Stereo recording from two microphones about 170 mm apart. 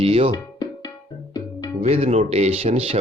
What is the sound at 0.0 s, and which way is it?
Speech, 35° right (ahead or behind).